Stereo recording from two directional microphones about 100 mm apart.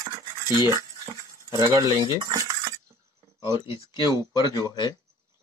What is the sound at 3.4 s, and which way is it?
Speech, 60° left (ahead or behind).